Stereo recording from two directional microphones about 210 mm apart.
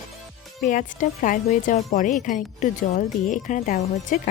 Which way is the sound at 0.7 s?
40° left (ahead or behind).